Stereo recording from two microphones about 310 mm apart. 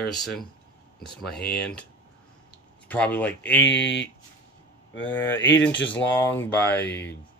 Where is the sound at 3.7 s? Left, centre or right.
Left.